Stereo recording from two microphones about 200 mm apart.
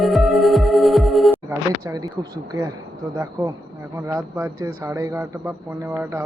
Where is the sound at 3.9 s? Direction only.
15° right (ahead or behind).